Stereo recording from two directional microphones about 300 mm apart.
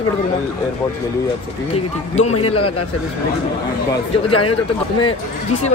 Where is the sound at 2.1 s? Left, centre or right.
Left.